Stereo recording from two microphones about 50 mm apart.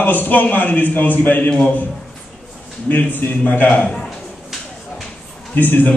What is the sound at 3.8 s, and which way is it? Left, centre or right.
Speech, centre.